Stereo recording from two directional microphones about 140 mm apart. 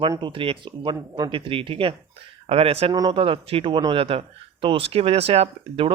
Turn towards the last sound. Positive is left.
turn(degrees=-45)  # may be behind; listen again after turning